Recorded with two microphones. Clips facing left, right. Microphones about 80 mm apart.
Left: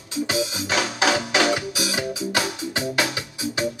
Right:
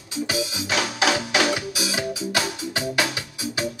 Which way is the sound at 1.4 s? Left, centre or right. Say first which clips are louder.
Left 2 dB; centre.